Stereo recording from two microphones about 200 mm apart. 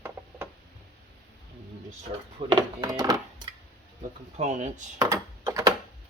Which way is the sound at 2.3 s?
20° right (ahead or behind).